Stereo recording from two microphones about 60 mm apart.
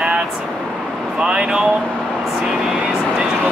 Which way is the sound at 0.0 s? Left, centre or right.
Centre.